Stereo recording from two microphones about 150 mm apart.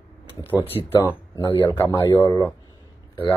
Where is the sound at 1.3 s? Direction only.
15° left (ahead or behind).